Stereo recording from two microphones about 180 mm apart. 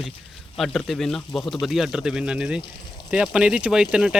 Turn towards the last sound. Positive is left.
turn(degrees=-5)  # may be behind; listen again after turning